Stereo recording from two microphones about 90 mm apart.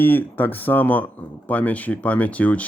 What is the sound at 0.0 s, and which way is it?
Speech, 20° left (ahead or behind).